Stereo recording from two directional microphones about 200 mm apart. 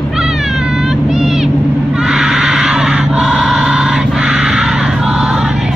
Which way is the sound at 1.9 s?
5° right (ahead or behind).